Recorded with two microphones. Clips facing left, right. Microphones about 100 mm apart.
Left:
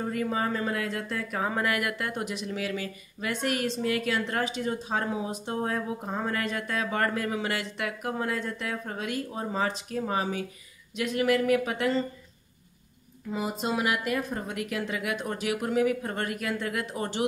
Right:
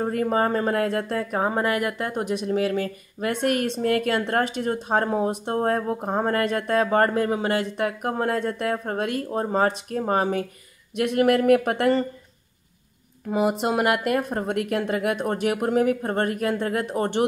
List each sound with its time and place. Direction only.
0.0 s speech: 45° right (ahead or behind)
1.1 s speech: 35° right (ahead or behind); by 12.1 s 60° right (ahead or behind)
13.3 s speech: 65° right (ahead or behind)